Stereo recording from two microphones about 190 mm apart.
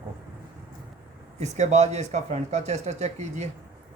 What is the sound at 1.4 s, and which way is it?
Speech, 35° right (ahead or behind).